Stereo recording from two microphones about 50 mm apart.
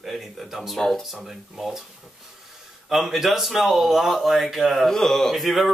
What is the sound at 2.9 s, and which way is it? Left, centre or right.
Speech, centre.